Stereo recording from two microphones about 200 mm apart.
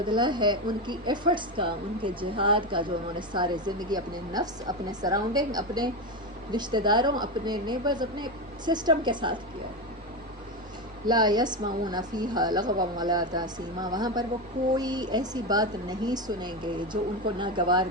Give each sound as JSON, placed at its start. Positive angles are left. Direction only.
{"t": 0.1, "sound": "a woman's voice", "side_deg": -20}
{"t": 11.0, "sound": "a woman's voice", "side_deg": -20}